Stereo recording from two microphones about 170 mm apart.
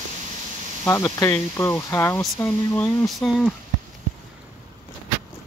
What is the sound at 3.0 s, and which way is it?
Speech, centre (ahead or behind).